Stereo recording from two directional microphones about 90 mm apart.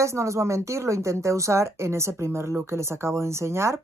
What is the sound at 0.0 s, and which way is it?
A woman's voice, 35° right (ahead or behind).